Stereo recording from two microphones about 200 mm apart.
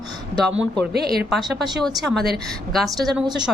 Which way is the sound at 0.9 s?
50° right (ahead or behind).